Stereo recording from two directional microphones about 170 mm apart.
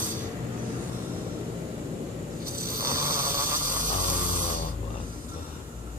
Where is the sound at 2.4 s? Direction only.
60° right (ahead or behind).